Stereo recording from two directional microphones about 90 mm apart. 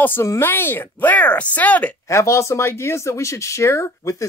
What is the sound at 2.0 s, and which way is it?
Speech, 35° left (ahead or behind).